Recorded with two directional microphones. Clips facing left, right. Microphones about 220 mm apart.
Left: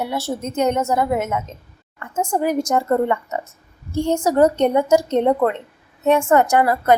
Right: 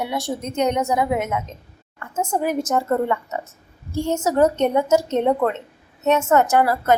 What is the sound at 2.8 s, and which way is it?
A woman's voice, 15° left (ahead or behind).